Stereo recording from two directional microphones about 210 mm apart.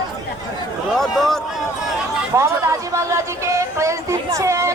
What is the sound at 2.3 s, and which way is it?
Speech, 15° right (ahead or behind).